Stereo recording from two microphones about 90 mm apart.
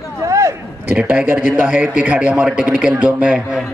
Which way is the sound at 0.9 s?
20° right (ahead or behind).